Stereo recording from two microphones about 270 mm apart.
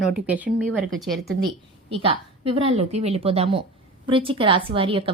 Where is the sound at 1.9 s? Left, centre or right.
Right.